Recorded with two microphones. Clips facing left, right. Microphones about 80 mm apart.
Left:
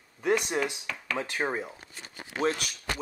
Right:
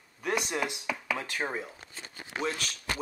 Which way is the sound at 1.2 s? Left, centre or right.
Left.